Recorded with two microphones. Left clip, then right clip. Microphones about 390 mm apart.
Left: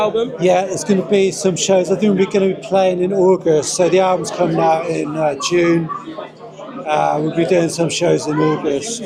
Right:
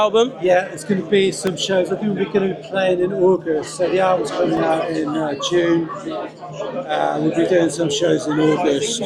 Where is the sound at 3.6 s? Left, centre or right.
Left.